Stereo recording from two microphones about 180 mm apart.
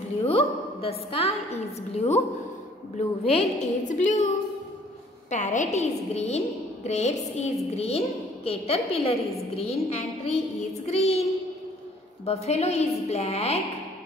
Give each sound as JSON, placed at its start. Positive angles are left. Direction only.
{"t": 0.2, "sound": "a woman's voice", "side_deg": 35}
{"t": 3.3, "sound": "a woman's voice", "side_deg": 40}
{"t": 5.3, "sound": "a woman's voice", "side_deg": 45}
{"t": 12.3, "sound": "a woman's voice", "side_deg": 35}